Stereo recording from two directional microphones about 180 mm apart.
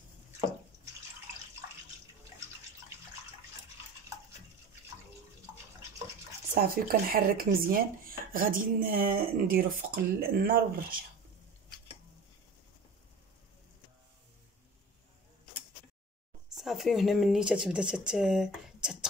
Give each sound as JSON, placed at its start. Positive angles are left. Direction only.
{"t": 6.5, "sound": "speech", "side_deg": -55}
{"t": 16.5, "sound": "speech", "side_deg": 0}